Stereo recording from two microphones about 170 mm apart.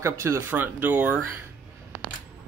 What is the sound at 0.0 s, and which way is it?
Speech, 15° right (ahead or behind).